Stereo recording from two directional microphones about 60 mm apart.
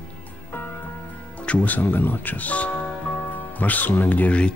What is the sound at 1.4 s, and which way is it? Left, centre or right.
Speech, left.